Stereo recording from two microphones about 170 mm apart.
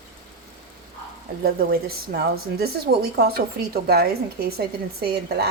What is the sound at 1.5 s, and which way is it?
A woman's voice, 65° right (ahead or behind).